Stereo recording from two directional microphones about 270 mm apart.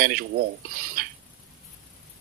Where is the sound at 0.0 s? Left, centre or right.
Right.